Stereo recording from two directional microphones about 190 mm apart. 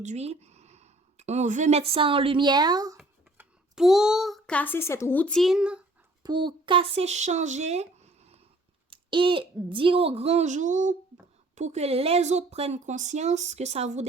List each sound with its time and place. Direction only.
0.0 s speech: 35° right (ahead or behind); by 3.0 s 20° right (ahead or behind)
3.0 s a child's voice: 5° right (ahead or behind)
6.2 s speech: 25° right (ahead or behind)